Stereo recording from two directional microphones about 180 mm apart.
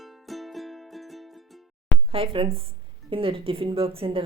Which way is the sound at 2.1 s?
30° right (ahead or behind).